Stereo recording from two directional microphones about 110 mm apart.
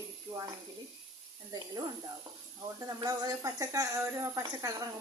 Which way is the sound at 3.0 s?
35° right (ahead or behind).